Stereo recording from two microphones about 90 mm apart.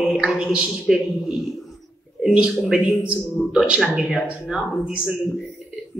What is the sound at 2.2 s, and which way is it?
Speech, 10° right (ahead or behind).